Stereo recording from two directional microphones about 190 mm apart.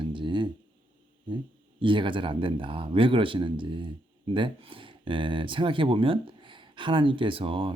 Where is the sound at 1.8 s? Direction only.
25° right (ahead or behind).